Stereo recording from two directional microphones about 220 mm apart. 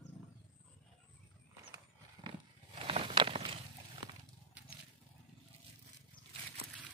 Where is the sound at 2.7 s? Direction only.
25° right (ahead or behind).